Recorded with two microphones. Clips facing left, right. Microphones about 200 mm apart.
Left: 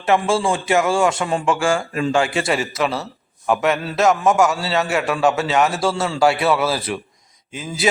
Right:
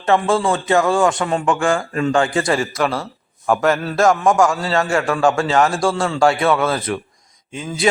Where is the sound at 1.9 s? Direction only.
20° left (ahead or behind).